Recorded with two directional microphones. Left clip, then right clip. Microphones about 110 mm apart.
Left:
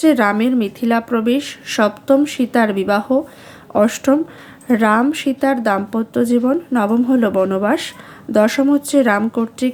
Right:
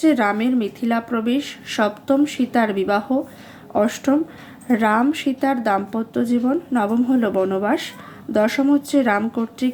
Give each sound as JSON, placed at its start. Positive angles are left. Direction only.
{"t": 0.0, "sound": "speech", "side_deg": 50}
{"t": 4.7, "sound": "speech", "side_deg": 40}